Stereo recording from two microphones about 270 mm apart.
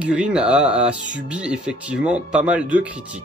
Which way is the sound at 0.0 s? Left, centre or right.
Centre.